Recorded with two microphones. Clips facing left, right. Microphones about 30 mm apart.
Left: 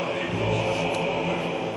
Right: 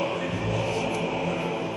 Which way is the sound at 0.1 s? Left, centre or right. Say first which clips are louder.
Left 1 dB; centre.